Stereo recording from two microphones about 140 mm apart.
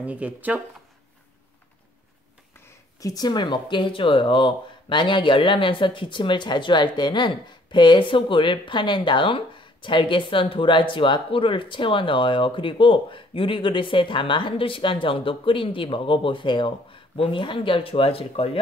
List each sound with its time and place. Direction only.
0.0 s speech: 10° right (ahead or behind)
2.6 s speech: 25° left (ahead or behind); by 18.6 s 40° left (ahead or behind)